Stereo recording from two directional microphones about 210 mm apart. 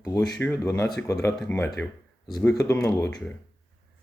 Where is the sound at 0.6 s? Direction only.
15° left (ahead or behind).